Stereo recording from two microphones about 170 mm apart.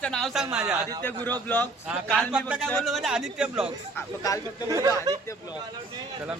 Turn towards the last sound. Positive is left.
turn(degrees=-20)  # may be behind; listen again after turning